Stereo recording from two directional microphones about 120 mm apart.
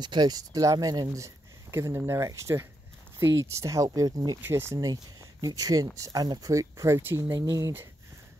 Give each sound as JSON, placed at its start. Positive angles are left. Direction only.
{"t": 0.0, "sound": "speech", "side_deg": -35}
{"t": 7.3, "sound": "speech", "side_deg": -30}